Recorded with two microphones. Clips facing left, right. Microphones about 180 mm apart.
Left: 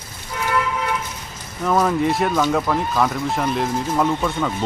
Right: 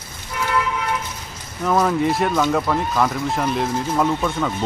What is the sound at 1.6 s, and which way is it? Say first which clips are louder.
Speech: even; centre (ahead or behind).